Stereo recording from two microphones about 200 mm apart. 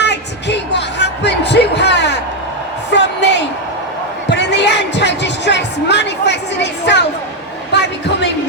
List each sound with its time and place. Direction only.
0.0 s music: 60° left (ahead or behind)
2.9 s a sound: 60° left (ahead or behind)
4.3 s music: 60° left (ahead or behind)